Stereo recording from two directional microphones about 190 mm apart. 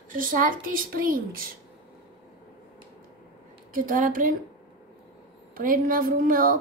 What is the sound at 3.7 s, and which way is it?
Speech, 45° right (ahead or behind).